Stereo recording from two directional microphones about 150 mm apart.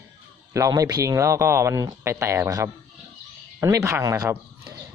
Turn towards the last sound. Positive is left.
turn(degrees=-20)  # may be behind; listen again after turning